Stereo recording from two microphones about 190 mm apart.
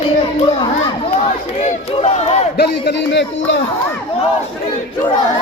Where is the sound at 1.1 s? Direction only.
30° left (ahead or behind).